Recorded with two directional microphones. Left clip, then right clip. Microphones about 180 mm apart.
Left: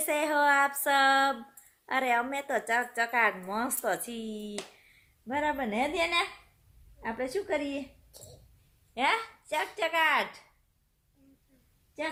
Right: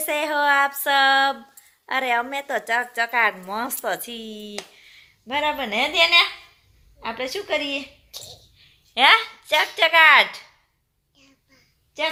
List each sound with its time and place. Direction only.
0.0 s speech: 10° left (ahead or behind)
9.0 s speech: 10° right (ahead or behind)